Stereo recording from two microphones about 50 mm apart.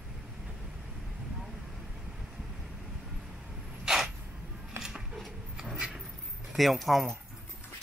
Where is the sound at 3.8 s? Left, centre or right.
Centre.